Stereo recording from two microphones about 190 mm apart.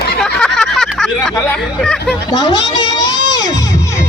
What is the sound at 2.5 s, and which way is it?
Crowd, 20° left (ahead or behind).